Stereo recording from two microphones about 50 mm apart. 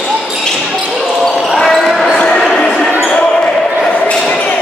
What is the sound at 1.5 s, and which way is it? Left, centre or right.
Basketball bounce, centre.